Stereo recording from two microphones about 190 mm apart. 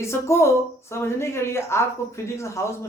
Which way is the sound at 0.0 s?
15° left (ahead or behind).